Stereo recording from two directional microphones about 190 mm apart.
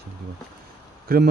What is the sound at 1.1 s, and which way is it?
Speech, 50° right (ahead or behind).